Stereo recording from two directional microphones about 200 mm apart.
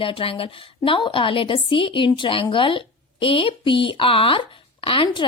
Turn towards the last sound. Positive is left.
turn(degrees=25)  # may be behind; listen again after turning